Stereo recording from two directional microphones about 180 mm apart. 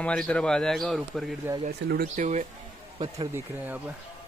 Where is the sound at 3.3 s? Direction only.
10° right (ahead or behind).